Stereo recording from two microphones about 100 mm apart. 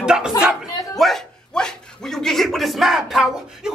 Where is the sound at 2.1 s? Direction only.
5° left (ahead or behind).